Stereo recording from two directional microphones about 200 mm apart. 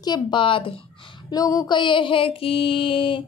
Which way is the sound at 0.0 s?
20° left (ahead or behind).